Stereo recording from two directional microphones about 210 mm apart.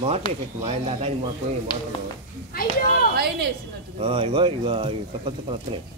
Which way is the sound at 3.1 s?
50° right (ahead or behind).